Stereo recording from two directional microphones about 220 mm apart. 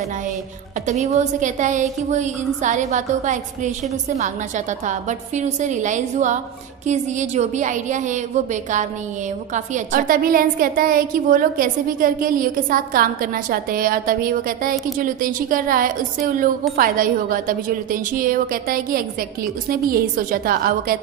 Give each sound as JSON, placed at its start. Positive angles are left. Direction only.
{"t": 0.8, "sound": "a woman's voice", "side_deg": -30}
{"t": 9.5, "sound": "a woman's voice", "side_deg": -40}